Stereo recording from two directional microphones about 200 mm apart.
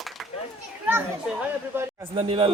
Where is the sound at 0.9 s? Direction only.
10° right (ahead or behind).